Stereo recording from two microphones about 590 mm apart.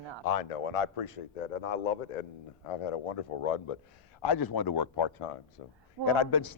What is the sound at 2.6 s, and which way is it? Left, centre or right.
Speech, left.